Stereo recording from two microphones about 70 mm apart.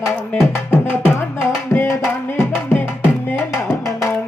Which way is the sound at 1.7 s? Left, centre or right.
Left.